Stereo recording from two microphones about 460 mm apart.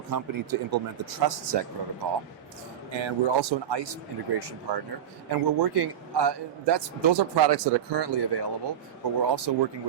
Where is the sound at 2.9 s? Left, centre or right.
Right.